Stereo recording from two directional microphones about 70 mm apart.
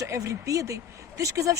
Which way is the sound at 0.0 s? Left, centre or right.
Right.